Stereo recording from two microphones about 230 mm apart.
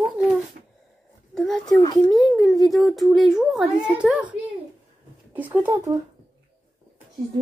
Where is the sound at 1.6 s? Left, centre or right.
Centre.